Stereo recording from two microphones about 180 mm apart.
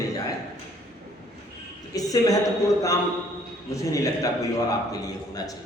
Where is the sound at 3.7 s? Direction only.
20° left (ahead or behind).